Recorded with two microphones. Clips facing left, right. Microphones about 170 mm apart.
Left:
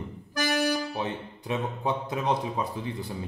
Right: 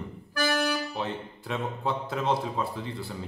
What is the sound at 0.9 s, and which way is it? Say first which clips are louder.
Speech: left 1 dB; 15° left (ahead or behind).